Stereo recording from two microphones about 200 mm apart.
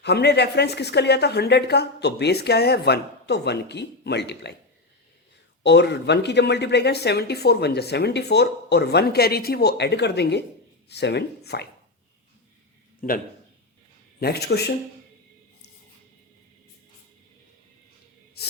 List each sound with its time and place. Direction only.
0.0 s speech: 55° left (ahead or behind)
5.6 s speech: 60° left (ahead or behind)
13.0 s a man's voice: 40° left (ahead or behind)
14.2 s speech: 55° left (ahead or behind)